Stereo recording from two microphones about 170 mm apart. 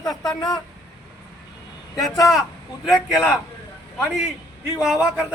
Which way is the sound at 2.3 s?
Centre (ahead or behind).